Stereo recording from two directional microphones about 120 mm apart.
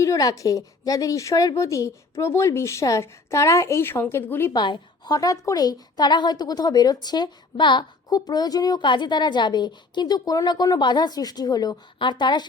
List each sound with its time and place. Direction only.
0.0 s a woman's voice: 30° left (ahead or behind)
4.5 s a woman's voice: 35° left (ahead or behind)